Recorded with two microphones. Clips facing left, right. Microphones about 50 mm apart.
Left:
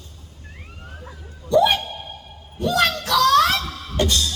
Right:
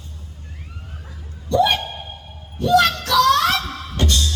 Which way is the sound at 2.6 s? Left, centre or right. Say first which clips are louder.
Right 4 dB; centre.